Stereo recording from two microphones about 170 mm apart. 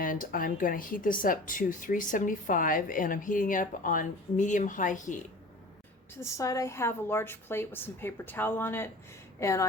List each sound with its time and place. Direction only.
0.0 s speech: 55° left (ahead or behind)
6.1 s a woman's voice: 15° left (ahead or behind)